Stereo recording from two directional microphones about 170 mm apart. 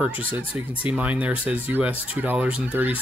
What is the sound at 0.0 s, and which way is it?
Speech, 10° right (ahead or behind).